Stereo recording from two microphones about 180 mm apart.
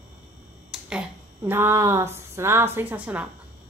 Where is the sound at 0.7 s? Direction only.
5° right (ahead or behind).